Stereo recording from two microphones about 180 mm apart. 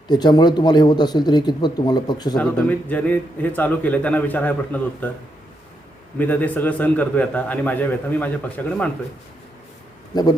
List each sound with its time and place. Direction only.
0.1 s speech: 25° left (ahead or behind)
2.4 s a man's voice: 10° left (ahead or behind)
6.1 s a man's voice: 10° left (ahead or behind)
10.1 s speech: 20° left (ahead or behind)